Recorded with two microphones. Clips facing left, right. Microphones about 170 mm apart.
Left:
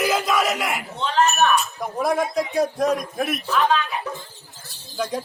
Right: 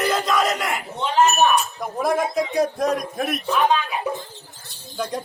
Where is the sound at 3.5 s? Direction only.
15° right (ahead or behind).